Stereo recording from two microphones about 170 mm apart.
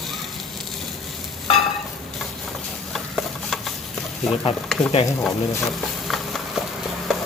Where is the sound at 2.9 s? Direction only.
Centre (ahead or behind).